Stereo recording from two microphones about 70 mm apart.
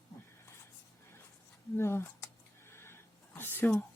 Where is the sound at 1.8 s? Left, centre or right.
Left.